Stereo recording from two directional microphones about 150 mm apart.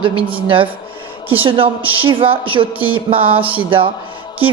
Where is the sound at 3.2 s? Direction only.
10° right (ahead or behind).